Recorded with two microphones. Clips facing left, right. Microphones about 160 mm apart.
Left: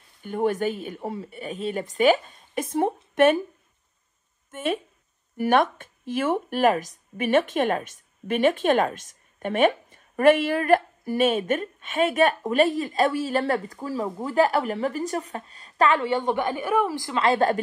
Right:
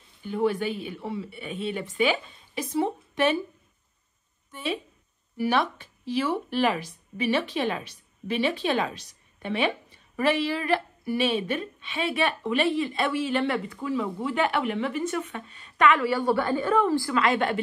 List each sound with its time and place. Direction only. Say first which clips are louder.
0.2 s speech: left 2 dB; 50° left (ahead or behind)
4.5 s speech: left 4 dB; 50° left (ahead or behind); by 17.2 s 15° left (ahead or behind)
17.2 s a woman's voice: left 7 dB; 35° left (ahead or behind)